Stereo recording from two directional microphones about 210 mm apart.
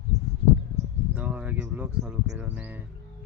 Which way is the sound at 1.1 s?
5° right (ahead or behind).